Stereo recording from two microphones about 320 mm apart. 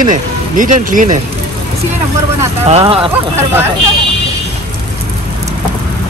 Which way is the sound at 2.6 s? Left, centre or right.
Centre.